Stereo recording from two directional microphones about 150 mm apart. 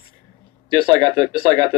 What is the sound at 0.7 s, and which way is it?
Speech, 30° right (ahead or behind).